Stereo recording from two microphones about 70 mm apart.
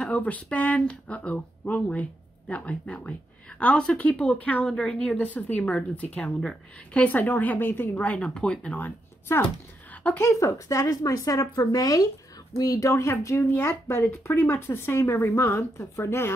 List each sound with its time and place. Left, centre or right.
0.1 s a woman's voice: left
5.1 s speech: left
10.2 s speech: left
12.5 s speech: left